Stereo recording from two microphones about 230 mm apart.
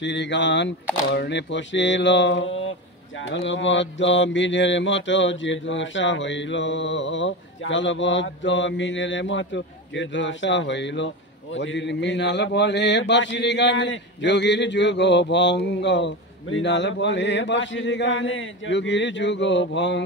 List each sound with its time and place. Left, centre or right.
0.0 s a man's voice: left